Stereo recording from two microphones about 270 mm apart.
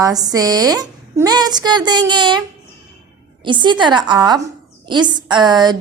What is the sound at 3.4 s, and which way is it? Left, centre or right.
A woman's voice, centre.